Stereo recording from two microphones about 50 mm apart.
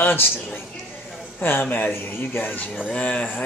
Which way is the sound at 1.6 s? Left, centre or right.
Left.